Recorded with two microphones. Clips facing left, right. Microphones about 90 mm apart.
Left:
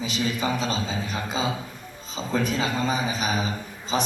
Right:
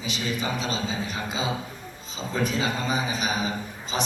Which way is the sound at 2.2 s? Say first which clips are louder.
Left 2 dB; 40° left (ahead or behind).